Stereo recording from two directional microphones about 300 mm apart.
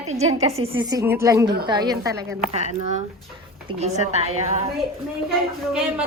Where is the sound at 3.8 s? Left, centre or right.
Right.